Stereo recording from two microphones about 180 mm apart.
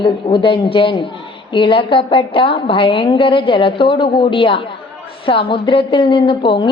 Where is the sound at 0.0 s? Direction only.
30° left (ahead or behind).